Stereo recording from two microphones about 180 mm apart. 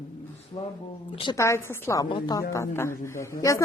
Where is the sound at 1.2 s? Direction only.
20° left (ahead or behind).